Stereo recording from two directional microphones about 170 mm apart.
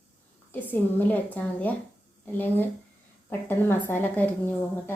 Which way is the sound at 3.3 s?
10° left (ahead or behind).